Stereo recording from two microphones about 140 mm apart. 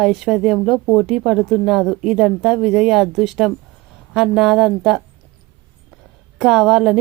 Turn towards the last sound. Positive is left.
turn(degrees=-5)  # may be behind; listen again after turning